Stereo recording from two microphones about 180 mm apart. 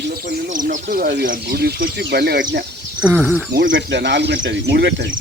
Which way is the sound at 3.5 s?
80° right.